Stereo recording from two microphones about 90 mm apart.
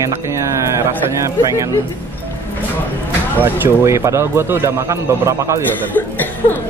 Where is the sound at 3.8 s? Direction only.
35° right (ahead or behind).